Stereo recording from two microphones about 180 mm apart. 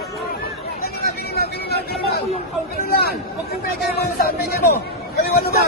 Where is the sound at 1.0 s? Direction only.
60° left (ahead or behind).